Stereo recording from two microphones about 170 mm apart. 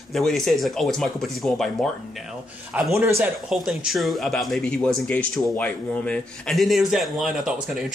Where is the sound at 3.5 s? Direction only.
Centre (ahead or behind).